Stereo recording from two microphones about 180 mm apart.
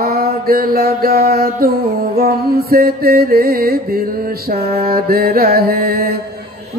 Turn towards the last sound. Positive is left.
turn(degrees=-55)  # may be behind; listen again after turning